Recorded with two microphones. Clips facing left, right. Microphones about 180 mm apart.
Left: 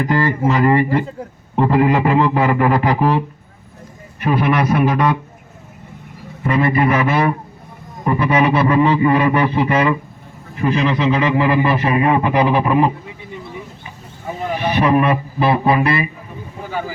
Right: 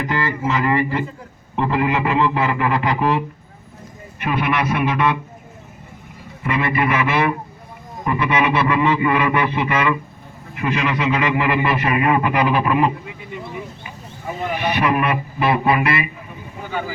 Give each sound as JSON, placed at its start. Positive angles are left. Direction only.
{"t": 0.0, "sound": "a man's voice", "side_deg": 40}
{"t": 6.4, "sound": "a man's voice", "side_deg": 35}
{"t": 14.5, "sound": "a man's voice", "side_deg": 30}